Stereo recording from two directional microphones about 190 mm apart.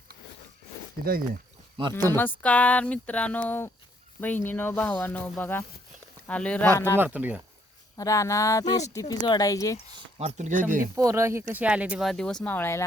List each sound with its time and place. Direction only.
1.0 s speech: 50° right (ahead or behind)
2.4 s speech: 5° left (ahead or behind)
6.9 s speech: 10° right (ahead or behind)
7.9 s speech: 15° left (ahead or behind)
10.2 s speech: 35° right (ahead or behind)
10.9 s speech: 15° right (ahead or behind); by 12.8 s 10° left (ahead or behind)